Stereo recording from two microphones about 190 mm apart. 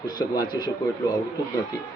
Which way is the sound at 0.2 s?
20° left (ahead or behind).